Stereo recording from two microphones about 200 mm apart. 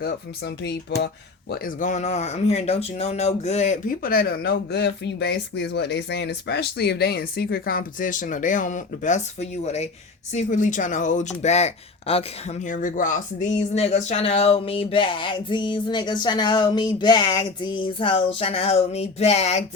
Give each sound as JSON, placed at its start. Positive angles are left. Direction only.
{"t": 0.0, "sound": "speech", "side_deg": 55}